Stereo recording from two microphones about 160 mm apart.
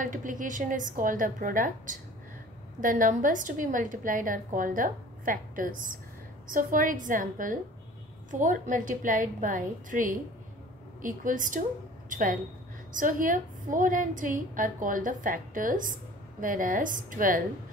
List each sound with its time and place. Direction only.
0.0 s a woman's voice: 55° right (ahead or behind)